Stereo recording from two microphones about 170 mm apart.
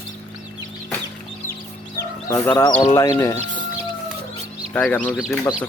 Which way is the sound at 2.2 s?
15° left (ahead or behind).